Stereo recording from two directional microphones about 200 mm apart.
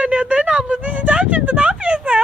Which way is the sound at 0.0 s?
5° right (ahead or behind).